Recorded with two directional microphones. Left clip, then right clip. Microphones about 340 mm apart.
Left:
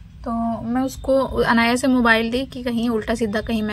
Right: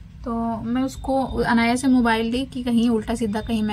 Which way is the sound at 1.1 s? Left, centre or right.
Centre.